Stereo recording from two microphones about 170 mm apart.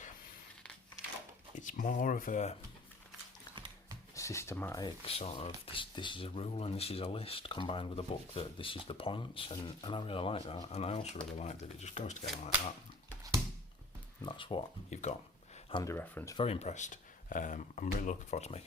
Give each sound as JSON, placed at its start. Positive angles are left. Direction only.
{"t": 1.5, "sound": "speech", "side_deg": 50}
{"t": 3.5, "sound": "dog", "side_deg": -25}
{"t": 4.1, "sound": "speech", "side_deg": 15}
{"t": 5.0, "sound": "speech", "side_deg": 35}
{"t": 14.2, "sound": "speech", "side_deg": 30}
{"t": 15.1, "sound": "speech", "side_deg": 45}
{"t": 15.7, "sound": "speech", "side_deg": 20}
{"t": 16.4, "sound": "speech", "side_deg": 40}